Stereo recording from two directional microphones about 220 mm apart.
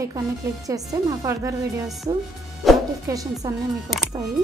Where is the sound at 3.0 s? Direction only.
15° right (ahead or behind).